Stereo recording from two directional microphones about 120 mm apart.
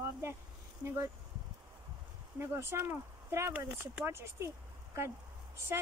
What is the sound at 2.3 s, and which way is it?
Speech, 20° right (ahead or behind).